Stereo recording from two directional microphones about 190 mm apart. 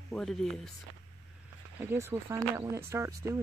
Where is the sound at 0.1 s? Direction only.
Centre (ahead or behind).